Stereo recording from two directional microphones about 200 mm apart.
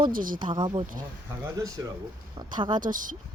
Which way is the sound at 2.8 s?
40° right (ahead or behind).